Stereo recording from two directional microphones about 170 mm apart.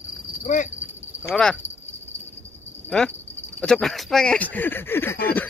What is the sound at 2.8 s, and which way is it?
Speech, 5° left (ahead or behind).